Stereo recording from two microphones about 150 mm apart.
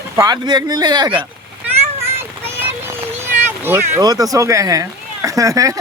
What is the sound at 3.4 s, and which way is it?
Speech, 15° right (ahead or behind).